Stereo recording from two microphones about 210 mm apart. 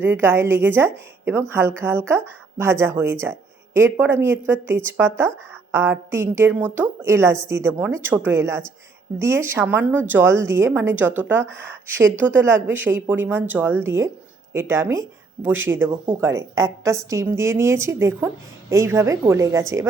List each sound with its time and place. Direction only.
0.0 s a woman's voice: 10° right (ahead or behind)